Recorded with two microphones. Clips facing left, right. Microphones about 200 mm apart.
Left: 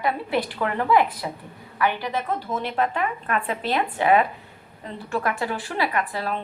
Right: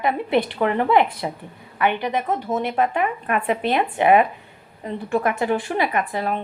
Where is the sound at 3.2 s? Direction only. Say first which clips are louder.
Right 4 dB; 15° right (ahead or behind).